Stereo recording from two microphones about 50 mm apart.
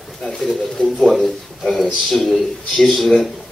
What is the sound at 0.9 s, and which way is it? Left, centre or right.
Speech, centre.